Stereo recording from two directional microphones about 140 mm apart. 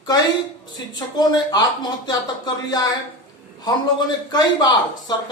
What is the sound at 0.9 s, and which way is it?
Speech, 30° left (ahead or behind).